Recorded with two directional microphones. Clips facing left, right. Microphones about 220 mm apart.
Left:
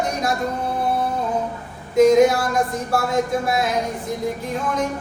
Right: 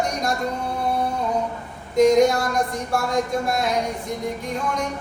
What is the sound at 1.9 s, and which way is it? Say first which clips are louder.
Speech: left 2 dB; 5° left (ahead or behind).